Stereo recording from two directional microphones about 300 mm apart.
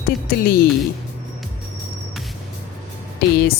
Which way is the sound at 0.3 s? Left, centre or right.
Left.